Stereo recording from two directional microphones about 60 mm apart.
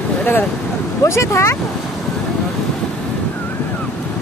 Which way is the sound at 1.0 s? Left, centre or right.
Left.